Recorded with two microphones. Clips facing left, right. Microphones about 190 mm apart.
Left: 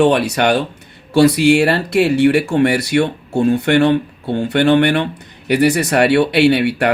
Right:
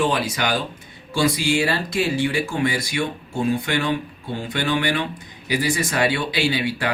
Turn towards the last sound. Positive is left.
turn(degrees=65)  # may be behind; listen again after turning